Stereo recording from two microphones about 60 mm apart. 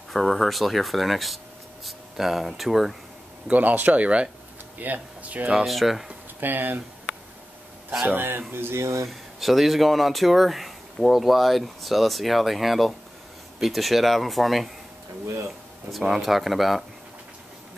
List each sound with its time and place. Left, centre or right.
0.1 s speech: centre
3.4 s speech: right
5.5 s speech: centre
6.4 s speech: right
8.1 s a sound: right
9.0 s speech: centre
15.9 s speech: centre